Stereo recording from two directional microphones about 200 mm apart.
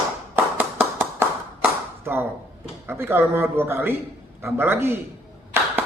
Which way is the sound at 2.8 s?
10° right (ahead or behind).